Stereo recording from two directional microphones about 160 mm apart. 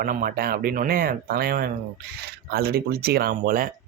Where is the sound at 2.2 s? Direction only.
80° right; by 3.7 s 60° right (ahead or behind).